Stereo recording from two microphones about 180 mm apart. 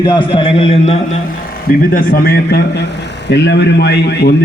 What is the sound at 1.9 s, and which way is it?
A man's voice, 55° left (ahead or behind).